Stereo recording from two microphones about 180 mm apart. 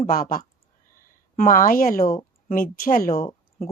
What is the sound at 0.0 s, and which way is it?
Speech, 50° left (ahead or behind).